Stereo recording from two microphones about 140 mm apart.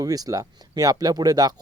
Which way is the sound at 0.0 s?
25° right (ahead or behind).